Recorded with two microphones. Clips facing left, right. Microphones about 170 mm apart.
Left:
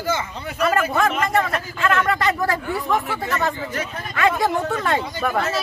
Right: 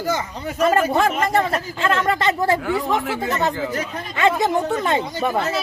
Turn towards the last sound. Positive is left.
turn(degrees=-20)  # may be behind; listen again after turning